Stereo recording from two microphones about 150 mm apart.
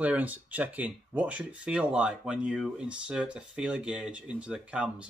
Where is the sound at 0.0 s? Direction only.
10° right (ahead or behind).